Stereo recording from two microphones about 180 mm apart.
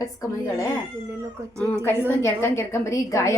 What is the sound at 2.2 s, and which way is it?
A woman's voice, 15° left (ahead or behind).